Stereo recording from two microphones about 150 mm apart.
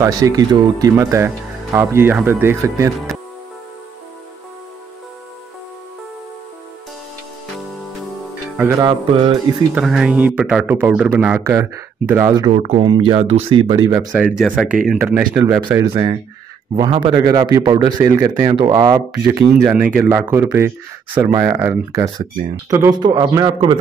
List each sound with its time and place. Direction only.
0.0 s speech: 25° right (ahead or behind)
3.1 s music: centre (ahead or behind)
8.5 s speech: 20° right (ahead or behind)
9.1 s speech: 35° right (ahead or behind)
9.8 s speech: 5° right (ahead or behind)
12.4 s speech: 45° right (ahead or behind)
12.8 s speech: 30° right (ahead or behind)
14.1 s speech: 5° right (ahead or behind)
15.9 s speech: 30° right (ahead or behind)
19.6 s speech: 5° right (ahead or behind); by 23.5 s 25° right (ahead or behind)